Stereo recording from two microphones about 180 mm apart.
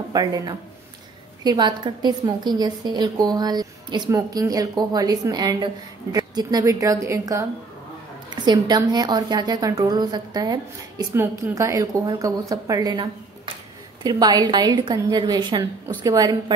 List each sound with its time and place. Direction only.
0.1 s a woman's voice: 20° right (ahead or behind)